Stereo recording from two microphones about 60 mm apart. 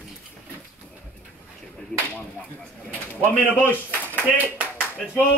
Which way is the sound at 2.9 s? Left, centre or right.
Left.